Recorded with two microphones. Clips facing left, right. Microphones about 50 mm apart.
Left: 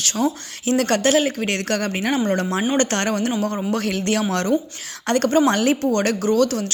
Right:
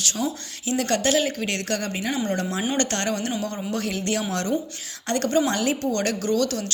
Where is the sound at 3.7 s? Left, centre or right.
Left.